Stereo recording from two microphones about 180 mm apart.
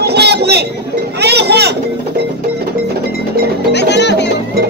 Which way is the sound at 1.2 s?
65° right (ahead or behind).